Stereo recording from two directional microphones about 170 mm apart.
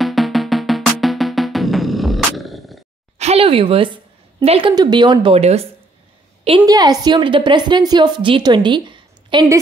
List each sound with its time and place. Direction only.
0.0 s music: centre (ahead or behind)
3.2 s speech: 35° right (ahead or behind)
6.6 s a woman's voice: 20° right (ahead or behind)